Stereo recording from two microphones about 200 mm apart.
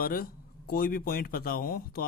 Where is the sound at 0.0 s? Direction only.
45° left (ahead or behind).